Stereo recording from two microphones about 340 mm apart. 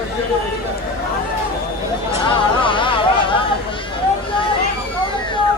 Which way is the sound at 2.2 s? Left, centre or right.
Centre.